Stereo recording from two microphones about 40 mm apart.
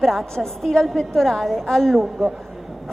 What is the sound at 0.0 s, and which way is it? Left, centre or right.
A woman's voice, centre.